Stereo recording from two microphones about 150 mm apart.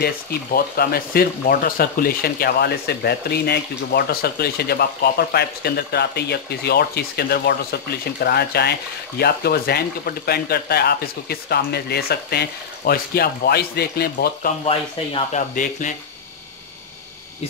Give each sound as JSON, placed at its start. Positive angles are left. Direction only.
{"t": 0.0, "sound": "speech", "side_deg": 90}
{"t": 15.3, "sound": "speech", "side_deg": 60}